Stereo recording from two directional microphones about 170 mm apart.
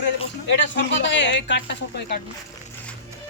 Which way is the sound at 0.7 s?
90° left.